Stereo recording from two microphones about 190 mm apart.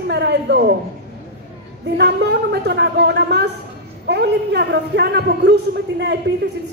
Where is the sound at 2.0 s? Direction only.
60° right (ahead or behind).